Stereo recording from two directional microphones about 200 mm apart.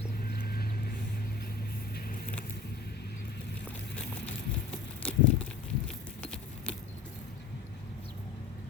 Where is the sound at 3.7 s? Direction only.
5° left (ahead or behind).